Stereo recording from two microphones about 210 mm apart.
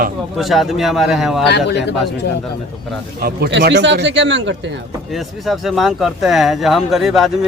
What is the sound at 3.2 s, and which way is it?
A man's voice, 45° right (ahead or behind).